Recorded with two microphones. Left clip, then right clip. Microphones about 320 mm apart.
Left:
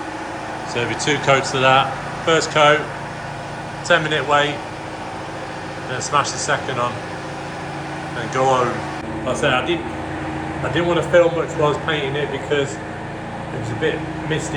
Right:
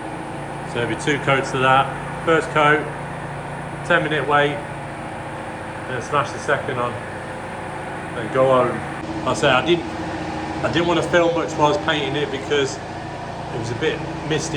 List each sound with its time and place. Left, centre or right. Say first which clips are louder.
0.8 s speech: left 1 dB; centre
3.8 s speech: left 2 dB; centre
6.1 s speech: left 2 dB; centre
8.4 s speech: right 1 dB; centre
10.8 s speech: left 3 dB; centre
13.8 s speech: left 2 dB; centre